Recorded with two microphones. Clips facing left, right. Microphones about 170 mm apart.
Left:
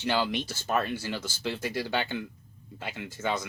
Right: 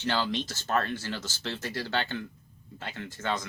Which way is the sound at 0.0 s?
10° left (ahead or behind).